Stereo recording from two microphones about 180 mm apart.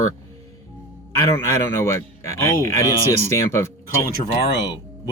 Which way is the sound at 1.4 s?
15° left (ahead or behind).